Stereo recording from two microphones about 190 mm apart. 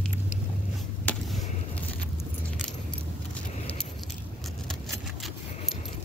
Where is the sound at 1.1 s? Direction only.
5° left (ahead or behind).